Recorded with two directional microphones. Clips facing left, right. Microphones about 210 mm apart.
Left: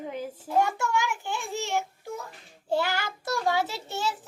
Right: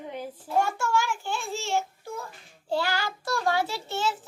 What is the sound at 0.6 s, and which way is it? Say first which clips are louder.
A child's voice: right 1 dB; 20° left (ahead or behind).